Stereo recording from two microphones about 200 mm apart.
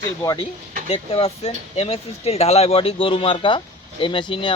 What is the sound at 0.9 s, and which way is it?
Speech, 30° left (ahead or behind).